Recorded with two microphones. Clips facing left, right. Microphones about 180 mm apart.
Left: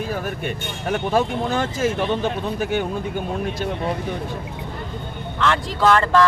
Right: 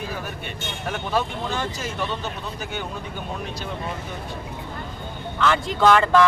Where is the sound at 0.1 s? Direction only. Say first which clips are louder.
Left 6 dB; 45° left (ahead or behind).